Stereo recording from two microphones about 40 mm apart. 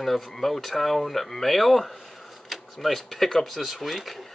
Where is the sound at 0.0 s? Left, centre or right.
Centre.